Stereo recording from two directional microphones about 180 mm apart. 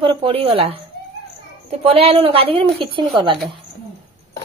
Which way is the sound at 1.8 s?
35° right (ahead or behind).